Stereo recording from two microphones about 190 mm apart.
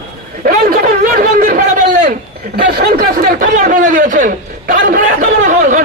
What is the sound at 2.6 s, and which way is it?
Speech, 55° right (ahead or behind).